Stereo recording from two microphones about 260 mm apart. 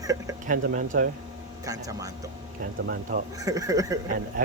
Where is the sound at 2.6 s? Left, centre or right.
Right.